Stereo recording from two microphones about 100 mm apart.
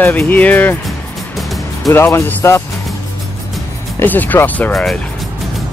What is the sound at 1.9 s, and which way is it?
Speech, 30° left (ahead or behind).